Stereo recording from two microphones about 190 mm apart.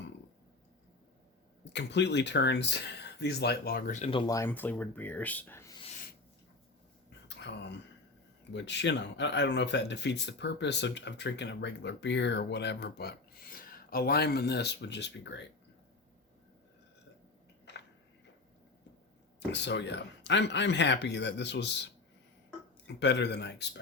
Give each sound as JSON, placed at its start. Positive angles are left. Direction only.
{"t": 1.7, "sound": "speech", "side_deg": 65}
{"t": 4.1, "sound": "speech", "side_deg": 25}
{"t": 4.4, "sound": "speech", "side_deg": 10}
{"t": 7.3, "sound": "a sound", "side_deg": 65}
{"t": 8.5, "sound": "speech", "side_deg": 70}
{"t": 19.5, "sound": "speech", "side_deg": 65}
{"t": 22.9, "sound": "speech", "side_deg": 65}